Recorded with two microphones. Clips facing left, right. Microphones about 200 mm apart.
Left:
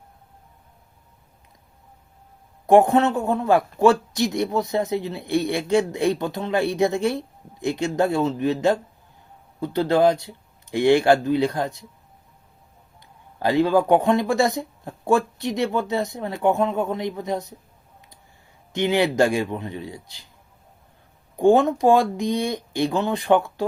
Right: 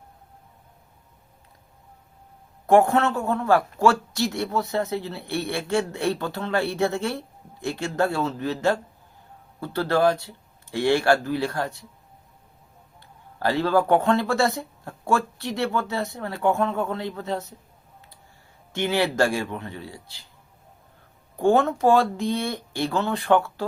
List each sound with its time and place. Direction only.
2.6 s a man's voice: 20° left (ahead or behind)
13.0 s a man's voice: 15° left (ahead or behind)
18.7 s a man's voice: 20° left (ahead or behind)
21.3 s a man's voice: 15° left (ahead or behind)